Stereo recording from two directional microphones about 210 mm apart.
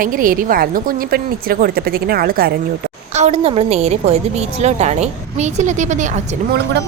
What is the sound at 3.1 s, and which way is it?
A woman's voice, 30° right (ahead or behind).